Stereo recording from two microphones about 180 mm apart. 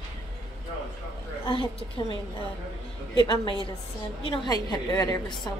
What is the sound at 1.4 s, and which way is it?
Speech, 30° left (ahead or behind).